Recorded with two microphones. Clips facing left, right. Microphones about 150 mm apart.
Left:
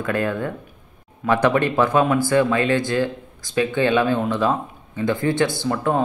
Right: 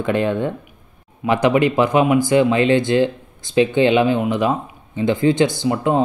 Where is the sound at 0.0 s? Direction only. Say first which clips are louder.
Right 4 dB; 20° right (ahead or behind).